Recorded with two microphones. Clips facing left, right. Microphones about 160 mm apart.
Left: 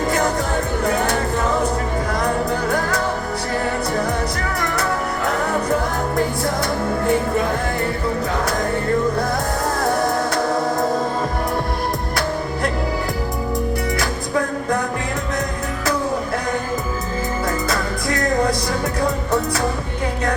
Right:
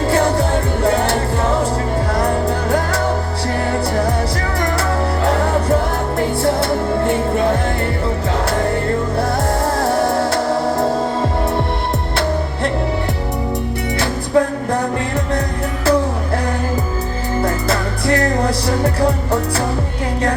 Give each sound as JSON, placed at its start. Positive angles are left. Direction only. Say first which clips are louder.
{"t": 0.1, "sound": "music", "louder": "right 7 dB", "side_deg": -30}
{"t": 4.8, "sound": "music", "louder": "right 4 dB", "side_deg": -30}
{"t": 9.7, "sound": "music", "louder": "right 2 dB", "side_deg": -30}
{"t": 14.0, "sound": "music", "louder": "right 6 dB", "side_deg": -30}
{"t": 17.4, "sound": "music", "louder": "right 5 dB", "side_deg": -30}